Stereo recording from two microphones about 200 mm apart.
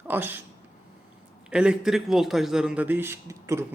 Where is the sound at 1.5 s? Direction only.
5° right (ahead or behind).